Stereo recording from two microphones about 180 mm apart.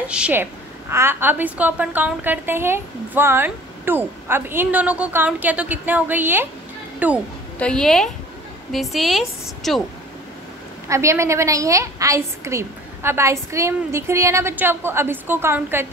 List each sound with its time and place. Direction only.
0.1 s a woman's voice: 10° right (ahead or behind)
7.5 s a woman's voice: 5° left (ahead or behind)
10.9 s a woman's voice: 15° right (ahead or behind)